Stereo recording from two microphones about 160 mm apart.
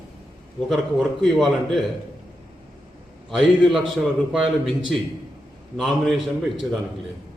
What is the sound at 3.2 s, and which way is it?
A man's voice, centre (ahead or behind).